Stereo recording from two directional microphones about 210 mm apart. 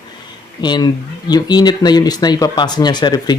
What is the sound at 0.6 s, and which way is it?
Speech, 20° left (ahead or behind).